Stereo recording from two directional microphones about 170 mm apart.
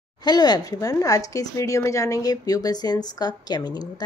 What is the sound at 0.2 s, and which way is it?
A woman's voice, 25° left (ahead or behind).